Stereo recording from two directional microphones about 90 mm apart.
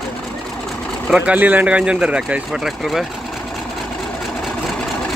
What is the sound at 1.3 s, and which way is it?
Speech, 20° right (ahead or behind).